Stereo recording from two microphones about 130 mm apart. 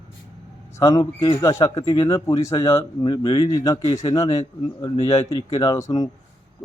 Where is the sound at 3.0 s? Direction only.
35° left (ahead or behind).